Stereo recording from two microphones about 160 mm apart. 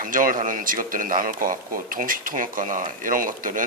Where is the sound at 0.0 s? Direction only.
55° right (ahead or behind).